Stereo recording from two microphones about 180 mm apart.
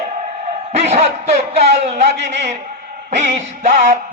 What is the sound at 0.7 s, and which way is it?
A man's voice, 35° right (ahead or behind).